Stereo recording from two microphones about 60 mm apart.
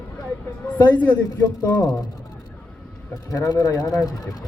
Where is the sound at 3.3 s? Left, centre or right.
Left.